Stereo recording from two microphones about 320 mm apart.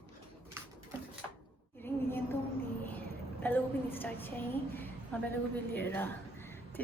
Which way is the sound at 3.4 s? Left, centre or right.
Centre.